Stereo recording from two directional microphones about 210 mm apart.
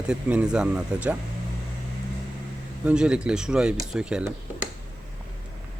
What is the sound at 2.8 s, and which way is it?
Speech, 5° right (ahead or behind).